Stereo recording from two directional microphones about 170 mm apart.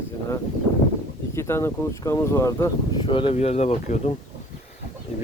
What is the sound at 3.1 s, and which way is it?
Speech, 30° left (ahead or behind).